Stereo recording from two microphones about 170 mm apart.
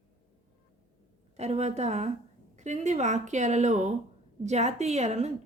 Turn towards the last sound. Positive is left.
turn(degrees=-40)  # may be behind; listen again after turning